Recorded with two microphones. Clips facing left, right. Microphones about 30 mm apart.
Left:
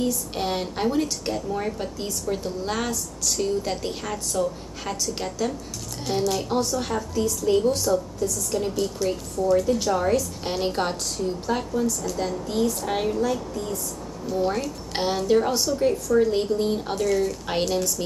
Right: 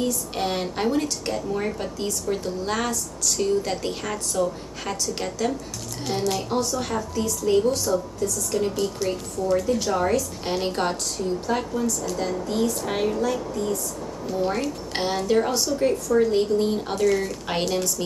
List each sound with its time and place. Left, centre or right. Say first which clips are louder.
0.0 s a woman's voice: even; centre
8.2 s a woman's voice: right 1 dB; centre